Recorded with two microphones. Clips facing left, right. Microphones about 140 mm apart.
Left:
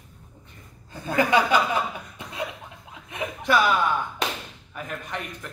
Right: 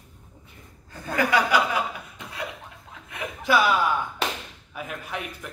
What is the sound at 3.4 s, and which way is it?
A man's voice, 5° right (ahead or behind).